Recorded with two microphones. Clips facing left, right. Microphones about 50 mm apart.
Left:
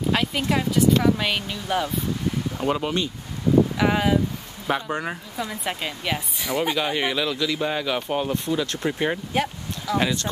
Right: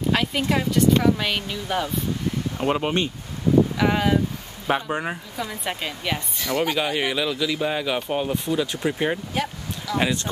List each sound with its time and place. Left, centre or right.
0.1 s speech: centre
2.6 s speech: right
3.7 s speech: centre
4.8 s speech: centre
6.7 s speech: centre
9.3 s speech: centre